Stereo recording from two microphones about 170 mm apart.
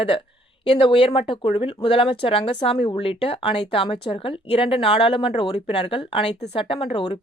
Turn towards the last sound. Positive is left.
turn(degrees=30)  # may be behind; listen again after turning